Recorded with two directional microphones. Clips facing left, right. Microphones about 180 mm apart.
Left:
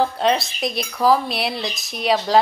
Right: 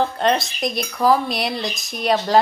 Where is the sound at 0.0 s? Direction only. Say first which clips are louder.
Even; centre (ahead or behind).